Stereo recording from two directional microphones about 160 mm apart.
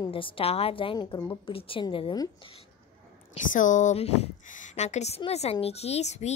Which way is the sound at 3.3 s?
50° left (ahead or behind).